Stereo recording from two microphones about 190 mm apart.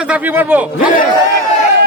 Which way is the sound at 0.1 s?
10° right (ahead or behind).